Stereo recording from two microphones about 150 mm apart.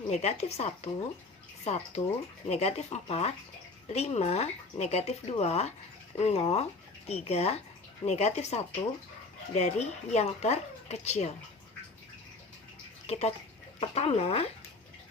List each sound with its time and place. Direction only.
0.1 s speech: 45° left (ahead or behind)
13.1 s speech: 45° left (ahead or behind)